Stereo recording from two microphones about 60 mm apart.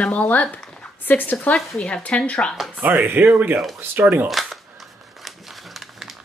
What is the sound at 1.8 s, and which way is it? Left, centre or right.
Speech, centre.